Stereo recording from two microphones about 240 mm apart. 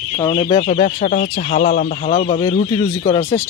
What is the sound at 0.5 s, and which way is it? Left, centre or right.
Speech, left.